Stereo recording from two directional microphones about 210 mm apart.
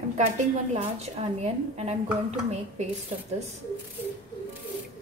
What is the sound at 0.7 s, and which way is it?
A woman's voice, 30° right (ahead or behind).